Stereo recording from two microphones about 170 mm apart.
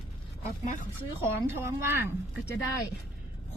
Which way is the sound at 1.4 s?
15° right (ahead or behind).